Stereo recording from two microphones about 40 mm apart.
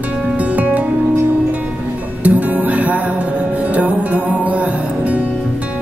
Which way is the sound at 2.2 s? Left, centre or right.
Right.